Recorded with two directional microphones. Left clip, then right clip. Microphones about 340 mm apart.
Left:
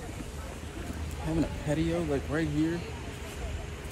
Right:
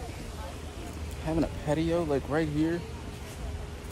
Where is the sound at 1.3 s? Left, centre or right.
Centre.